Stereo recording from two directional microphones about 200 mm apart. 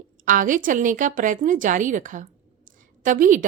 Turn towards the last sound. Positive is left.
turn(degrees=-40)  # may be behind; listen again after turning